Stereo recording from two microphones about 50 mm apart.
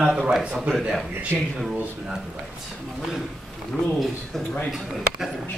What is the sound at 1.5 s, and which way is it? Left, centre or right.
Speech, centre.